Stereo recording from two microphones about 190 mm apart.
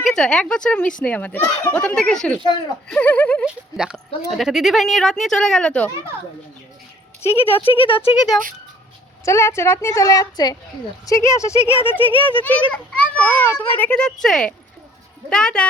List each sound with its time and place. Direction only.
0.0 s a woman's voice: 5° left (ahead or behind)
3.4 s speech: 5° right (ahead or behind)
7.2 s a woman's voice: 15° left (ahead or behind)
7.5 s speech: 30° left (ahead or behind)
9.2 s a woman's voice: 15° left (ahead or behind)
11.9 s speech: 30° left (ahead or behind)
12.4 s a woman's voice: 10° left (ahead or behind)